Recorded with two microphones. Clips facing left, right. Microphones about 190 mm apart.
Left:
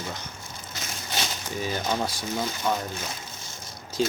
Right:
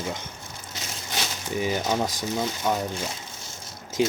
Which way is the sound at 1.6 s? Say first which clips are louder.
Right 3 dB; 15° right (ahead or behind).